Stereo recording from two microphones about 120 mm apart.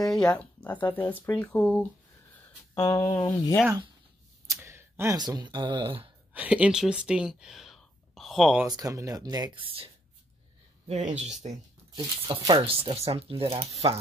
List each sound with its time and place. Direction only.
0.0 s a sound: 5° left (ahead or behind)
0.8 s speech: 15° left (ahead or behind)
2.8 s speech: 30° left (ahead or behind)
4.5 s a sound: 20° right (ahead or behind)
5.1 s speech: 35° right (ahead or behind)
6.3 s speech: 10° right (ahead or behind)
8.6 s speech: 30° right (ahead or behind)
9.5 s speech: 45° right (ahead or behind)
10.9 s speech: 80° right
12.0 s speech: 35° right (ahead or behind)
12.6 s speech: 50° right (ahead or behind)